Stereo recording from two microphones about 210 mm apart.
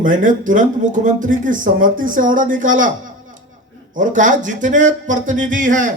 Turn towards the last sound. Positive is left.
turn(degrees=-35)  # may be behind; listen again after turning